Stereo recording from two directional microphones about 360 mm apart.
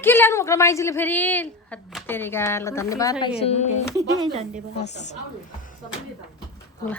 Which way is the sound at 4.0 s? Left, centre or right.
Centre.